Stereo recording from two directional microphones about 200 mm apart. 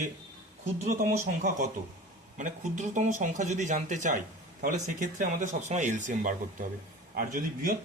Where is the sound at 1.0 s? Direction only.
40° right (ahead or behind).